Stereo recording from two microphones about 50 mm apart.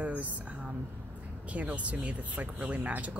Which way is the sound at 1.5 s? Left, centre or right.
Right.